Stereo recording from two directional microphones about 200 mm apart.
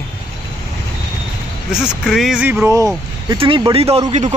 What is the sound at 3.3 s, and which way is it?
Speech, 20° right (ahead or behind).